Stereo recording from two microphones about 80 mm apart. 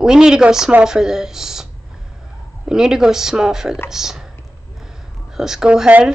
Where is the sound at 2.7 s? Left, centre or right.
Centre.